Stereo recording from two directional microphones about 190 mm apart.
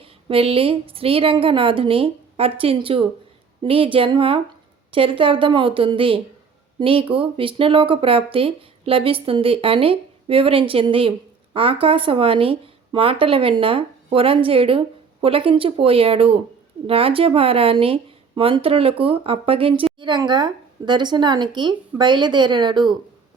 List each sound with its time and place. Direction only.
0.0 s speech: 30° right (ahead or behind)